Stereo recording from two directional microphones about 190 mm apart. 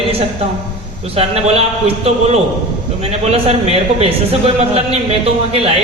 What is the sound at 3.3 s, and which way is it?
Speech, 30° right (ahead or behind).